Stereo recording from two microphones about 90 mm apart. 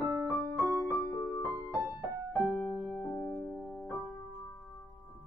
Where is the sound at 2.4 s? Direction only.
20° left (ahead or behind).